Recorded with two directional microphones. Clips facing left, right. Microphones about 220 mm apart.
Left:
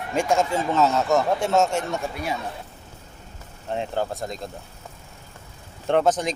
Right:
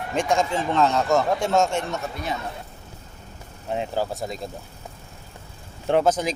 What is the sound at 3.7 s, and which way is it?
Speech, 5° right (ahead or behind).